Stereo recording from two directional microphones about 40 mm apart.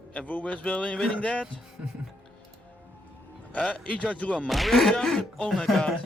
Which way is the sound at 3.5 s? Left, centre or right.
Left.